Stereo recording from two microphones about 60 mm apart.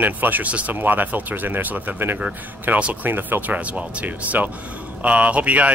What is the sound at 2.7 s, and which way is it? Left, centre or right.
Speech, right.